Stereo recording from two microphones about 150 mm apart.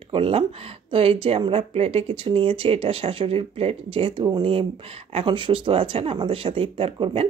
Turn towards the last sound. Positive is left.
turn(degrees=-35)  # may be behind; listen again after turning